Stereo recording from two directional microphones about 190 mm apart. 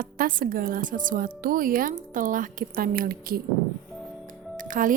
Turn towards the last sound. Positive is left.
turn(degrees=-45)  # may be behind; listen again after turning